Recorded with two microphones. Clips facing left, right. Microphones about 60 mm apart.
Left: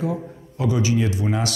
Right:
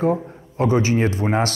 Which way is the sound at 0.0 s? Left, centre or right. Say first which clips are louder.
Right 6 dB; right.